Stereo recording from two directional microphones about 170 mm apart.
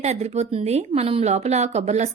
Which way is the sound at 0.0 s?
40° right (ahead or behind).